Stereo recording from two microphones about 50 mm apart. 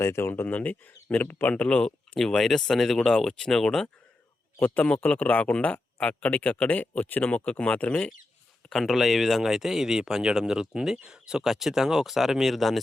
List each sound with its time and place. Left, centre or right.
0.0 s speech: left
0.4 s speech: left
1.6 s speech: left
2.1 s speech: centre
4.6 s speech: left
8.7 s speech: centre